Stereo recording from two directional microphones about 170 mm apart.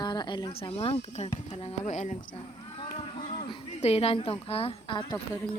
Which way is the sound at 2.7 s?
30° left (ahead or behind).